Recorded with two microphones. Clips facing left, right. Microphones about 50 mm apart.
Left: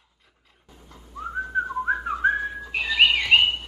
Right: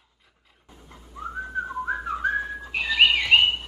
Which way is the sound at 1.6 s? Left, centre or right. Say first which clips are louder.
Left 4 dB; left.